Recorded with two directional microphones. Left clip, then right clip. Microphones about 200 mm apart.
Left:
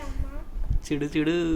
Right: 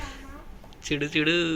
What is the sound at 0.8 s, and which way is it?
Speech, 15° left (ahead or behind).